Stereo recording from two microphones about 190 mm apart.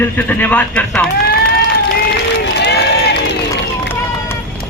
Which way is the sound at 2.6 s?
60° left (ahead or behind).